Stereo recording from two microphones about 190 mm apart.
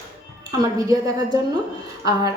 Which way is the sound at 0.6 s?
20° right (ahead or behind).